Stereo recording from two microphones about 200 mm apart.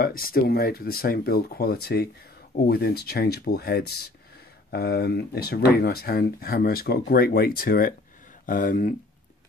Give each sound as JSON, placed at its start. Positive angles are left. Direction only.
{"t": 0.0, "sound": "speech", "side_deg": 45}